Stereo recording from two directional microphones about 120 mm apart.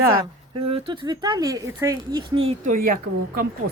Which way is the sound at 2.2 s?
55° right (ahead or behind).